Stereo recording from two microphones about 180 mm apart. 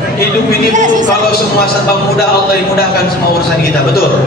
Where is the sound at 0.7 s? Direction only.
45° right (ahead or behind).